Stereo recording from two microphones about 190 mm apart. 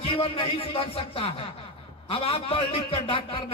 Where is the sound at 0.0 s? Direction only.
30° left (ahead or behind).